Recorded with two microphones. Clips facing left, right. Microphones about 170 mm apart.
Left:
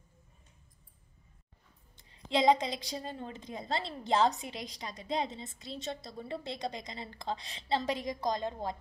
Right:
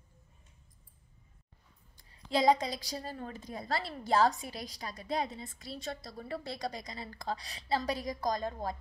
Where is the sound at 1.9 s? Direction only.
25° left (ahead or behind).